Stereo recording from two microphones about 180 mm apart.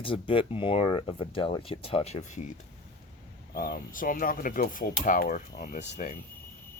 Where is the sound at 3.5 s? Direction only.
55° left (ahead or behind).